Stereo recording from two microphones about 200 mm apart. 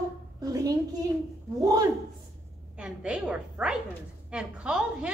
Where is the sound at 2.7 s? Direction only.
5° right (ahead or behind).